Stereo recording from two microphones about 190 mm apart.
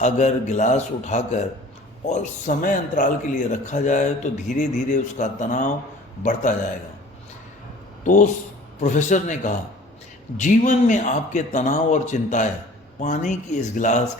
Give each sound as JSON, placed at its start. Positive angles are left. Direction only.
{"t": 0.0, "sound": "speech", "side_deg": 40}
{"t": 8.0, "sound": "speech", "side_deg": 40}